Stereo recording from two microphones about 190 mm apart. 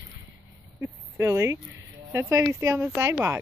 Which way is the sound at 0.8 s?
15° right (ahead or behind).